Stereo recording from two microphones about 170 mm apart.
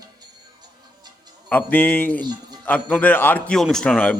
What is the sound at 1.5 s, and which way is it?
A man's voice, 10° left (ahead or behind).